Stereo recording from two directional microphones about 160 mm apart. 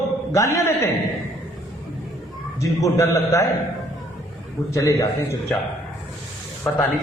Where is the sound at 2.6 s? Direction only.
20° left (ahead or behind).